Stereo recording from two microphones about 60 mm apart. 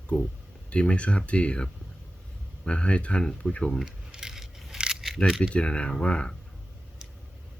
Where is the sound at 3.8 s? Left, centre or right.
Centre.